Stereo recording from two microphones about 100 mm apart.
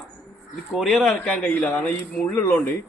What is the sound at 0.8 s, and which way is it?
A man's voice, 5° left (ahead or behind).